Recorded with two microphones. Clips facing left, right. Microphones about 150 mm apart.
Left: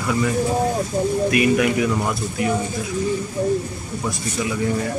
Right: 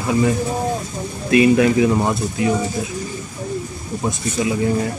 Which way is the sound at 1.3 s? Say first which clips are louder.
Right 8 dB; 30° right (ahead or behind).